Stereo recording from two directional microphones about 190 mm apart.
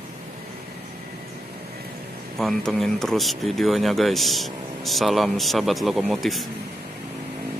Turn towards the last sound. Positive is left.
turn(degrees=0)  # may be behind; listen again after turning